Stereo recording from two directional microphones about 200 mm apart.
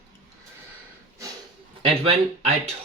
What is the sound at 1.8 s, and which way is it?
Speech, 30° right (ahead or behind).